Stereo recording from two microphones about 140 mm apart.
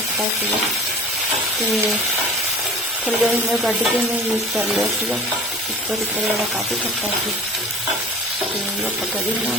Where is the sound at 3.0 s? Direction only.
10° right (ahead or behind).